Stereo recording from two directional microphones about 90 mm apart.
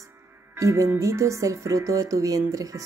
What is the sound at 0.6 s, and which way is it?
Speech, 35° right (ahead or behind).